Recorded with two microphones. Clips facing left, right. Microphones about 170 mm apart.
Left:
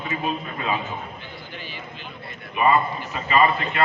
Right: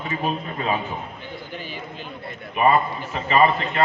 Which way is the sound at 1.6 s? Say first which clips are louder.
Right 3 dB; 45° right (ahead or behind).